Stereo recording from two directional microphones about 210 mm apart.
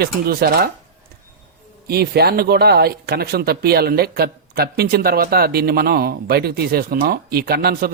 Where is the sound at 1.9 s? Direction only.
50° right (ahead or behind).